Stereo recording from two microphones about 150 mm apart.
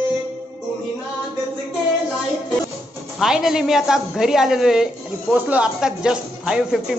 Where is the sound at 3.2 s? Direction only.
Centre (ahead or behind).